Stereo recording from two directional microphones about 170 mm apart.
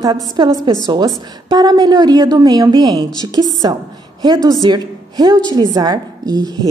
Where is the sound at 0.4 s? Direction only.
25° right (ahead or behind).